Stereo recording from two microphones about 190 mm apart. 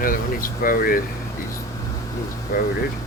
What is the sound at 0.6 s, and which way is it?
Speech, 50° left (ahead or behind).